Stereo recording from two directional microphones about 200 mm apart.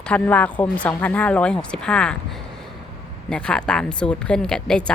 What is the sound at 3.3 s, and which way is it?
A woman's voice, 5° left (ahead or behind).